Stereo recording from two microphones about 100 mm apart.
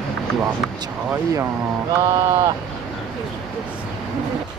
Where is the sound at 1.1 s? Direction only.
25° right (ahead or behind).